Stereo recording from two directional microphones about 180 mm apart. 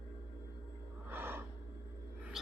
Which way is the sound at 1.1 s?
10° right (ahead or behind).